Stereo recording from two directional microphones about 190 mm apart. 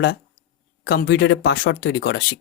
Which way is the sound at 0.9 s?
60° left (ahead or behind).